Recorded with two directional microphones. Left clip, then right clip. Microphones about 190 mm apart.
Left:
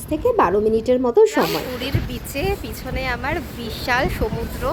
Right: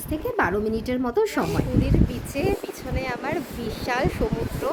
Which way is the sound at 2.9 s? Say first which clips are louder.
Left 4 dB; 5° right (ahead or behind).